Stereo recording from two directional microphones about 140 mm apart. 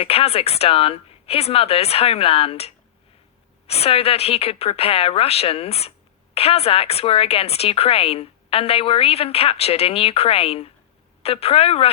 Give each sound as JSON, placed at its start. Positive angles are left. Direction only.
{"t": 0.0, "sound": "a woman's voice", "side_deg": 45}